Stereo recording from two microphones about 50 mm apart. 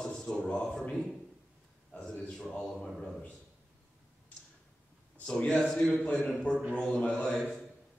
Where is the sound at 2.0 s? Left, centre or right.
Centre.